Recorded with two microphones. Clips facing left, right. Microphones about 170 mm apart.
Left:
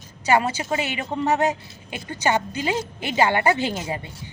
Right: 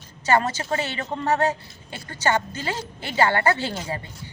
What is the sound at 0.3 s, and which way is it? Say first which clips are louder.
A man's voice: left 1 dB; 10° left (ahead or behind).